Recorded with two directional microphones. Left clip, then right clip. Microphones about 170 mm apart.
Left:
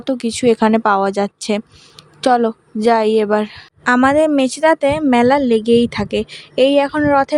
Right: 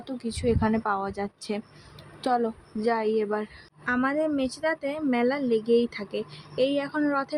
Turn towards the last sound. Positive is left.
turn(degrees=50)  # may be behind; listen again after turning